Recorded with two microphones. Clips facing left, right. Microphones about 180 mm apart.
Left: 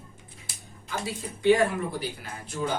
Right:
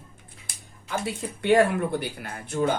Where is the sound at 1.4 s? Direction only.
60° right (ahead or behind).